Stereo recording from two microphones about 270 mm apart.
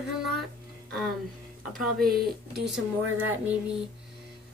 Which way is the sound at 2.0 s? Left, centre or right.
Right.